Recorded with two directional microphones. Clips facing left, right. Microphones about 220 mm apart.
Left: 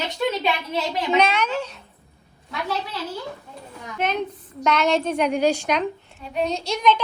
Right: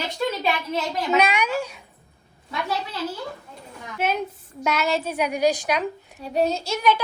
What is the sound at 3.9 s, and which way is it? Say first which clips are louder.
A woman's voice: even; 5° right (ahead or behind).